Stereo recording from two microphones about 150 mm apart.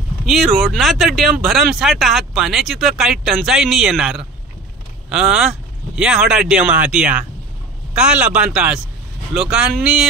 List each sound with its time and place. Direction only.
0.3 s speech: centre (ahead or behind)